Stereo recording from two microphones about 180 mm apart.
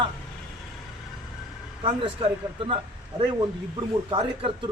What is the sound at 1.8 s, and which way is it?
Speech, 30° right (ahead or behind).